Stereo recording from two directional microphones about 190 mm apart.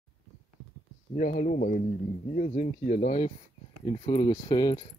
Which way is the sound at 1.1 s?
40° left (ahead or behind).